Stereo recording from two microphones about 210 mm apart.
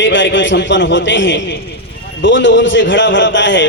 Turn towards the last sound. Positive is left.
turn(degrees=60)  # may be behind; listen again after turning